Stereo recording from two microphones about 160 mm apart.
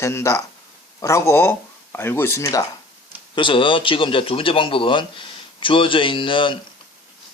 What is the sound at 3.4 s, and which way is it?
Speech, 30° left (ahead or behind).